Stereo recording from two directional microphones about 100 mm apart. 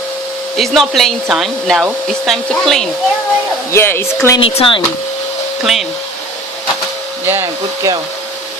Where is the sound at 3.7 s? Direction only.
25° left (ahead or behind).